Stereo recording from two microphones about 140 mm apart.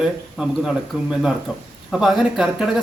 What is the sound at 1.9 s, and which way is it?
Speech, centre (ahead or behind).